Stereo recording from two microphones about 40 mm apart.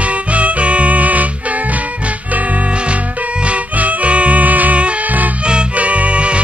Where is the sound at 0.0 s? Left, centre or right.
Right.